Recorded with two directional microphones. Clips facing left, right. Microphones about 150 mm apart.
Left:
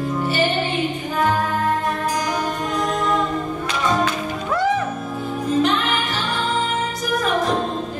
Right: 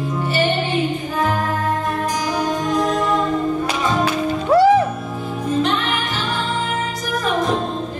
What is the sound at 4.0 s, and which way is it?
Music, 35° right (ahead or behind).